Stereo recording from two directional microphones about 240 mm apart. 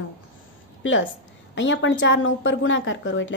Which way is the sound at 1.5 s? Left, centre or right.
Left.